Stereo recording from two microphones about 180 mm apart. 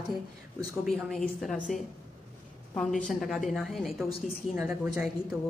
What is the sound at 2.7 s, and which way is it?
A woman's voice, centre (ahead or behind).